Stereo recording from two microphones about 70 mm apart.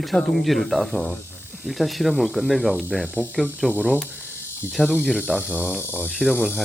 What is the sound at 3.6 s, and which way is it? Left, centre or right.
Speech, centre.